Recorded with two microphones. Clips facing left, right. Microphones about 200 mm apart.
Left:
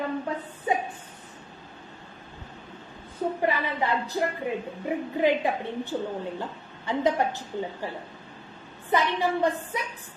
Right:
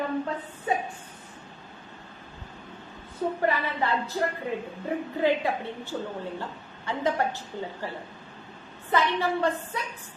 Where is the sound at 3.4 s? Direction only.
15° left (ahead or behind).